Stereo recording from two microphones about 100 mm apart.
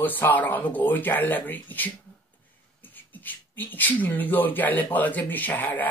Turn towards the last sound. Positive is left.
turn(degrees=15)  # may be behind; listen again after turning